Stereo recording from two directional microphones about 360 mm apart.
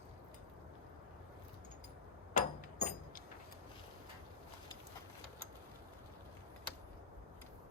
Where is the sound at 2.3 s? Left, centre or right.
Left.